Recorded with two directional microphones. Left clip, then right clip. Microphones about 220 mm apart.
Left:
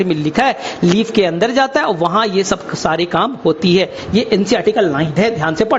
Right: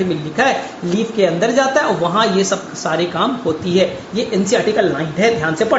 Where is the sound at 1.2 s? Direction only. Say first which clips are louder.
Right 2 dB; 50° left (ahead or behind).